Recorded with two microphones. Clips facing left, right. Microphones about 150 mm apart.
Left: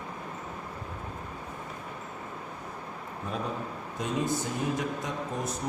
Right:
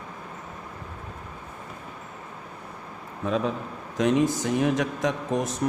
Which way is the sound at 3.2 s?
90° right.